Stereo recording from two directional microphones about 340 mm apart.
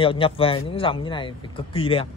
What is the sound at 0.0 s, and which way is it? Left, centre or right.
A man's voice, centre.